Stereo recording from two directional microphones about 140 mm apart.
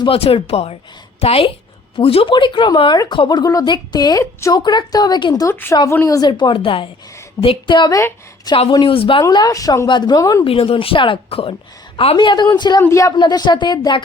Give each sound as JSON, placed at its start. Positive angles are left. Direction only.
{"t": 0.0, "sound": "speech", "side_deg": 40}
{"t": 8.7, "sound": "speech", "side_deg": 35}
{"t": 9.2, "sound": "speech", "side_deg": 25}
{"t": 10.4, "sound": "speech", "side_deg": 40}
{"t": 13.1, "sound": "speech", "side_deg": 35}